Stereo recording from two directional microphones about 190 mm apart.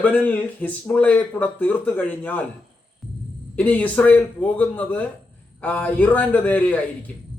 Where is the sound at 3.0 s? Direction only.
Centre (ahead or behind).